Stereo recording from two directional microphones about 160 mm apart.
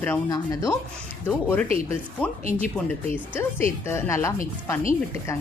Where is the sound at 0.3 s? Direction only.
20° left (ahead or behind).